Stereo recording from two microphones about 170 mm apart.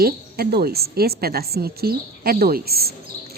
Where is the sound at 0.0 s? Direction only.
65° right (ahead or behind).